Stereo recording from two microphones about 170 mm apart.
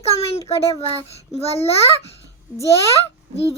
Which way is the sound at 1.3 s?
35° left (ahead or behind).